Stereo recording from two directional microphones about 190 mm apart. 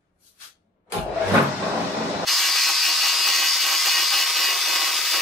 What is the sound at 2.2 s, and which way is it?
Wood, centre (ahead or behind).